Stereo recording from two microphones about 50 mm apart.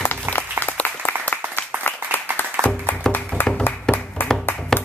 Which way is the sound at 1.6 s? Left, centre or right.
Left.